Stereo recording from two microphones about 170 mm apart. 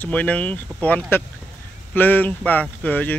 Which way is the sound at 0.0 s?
10° left (ahead or behind).